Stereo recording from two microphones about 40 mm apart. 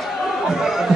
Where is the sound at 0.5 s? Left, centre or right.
Centre.